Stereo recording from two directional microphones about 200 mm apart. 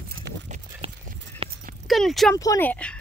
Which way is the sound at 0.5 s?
30° right (ahead or behind).